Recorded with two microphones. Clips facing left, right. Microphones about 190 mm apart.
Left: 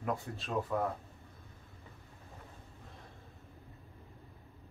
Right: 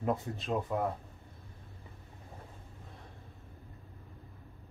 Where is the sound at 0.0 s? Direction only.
20° right (ahead or behind).